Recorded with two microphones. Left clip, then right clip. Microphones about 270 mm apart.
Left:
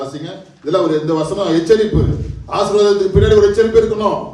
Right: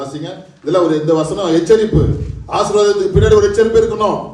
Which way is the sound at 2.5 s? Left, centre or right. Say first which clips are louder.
Even; right.